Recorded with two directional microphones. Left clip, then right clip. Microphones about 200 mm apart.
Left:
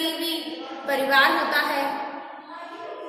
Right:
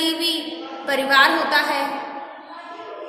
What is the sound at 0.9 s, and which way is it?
Speech, 35° right (ahead or behind).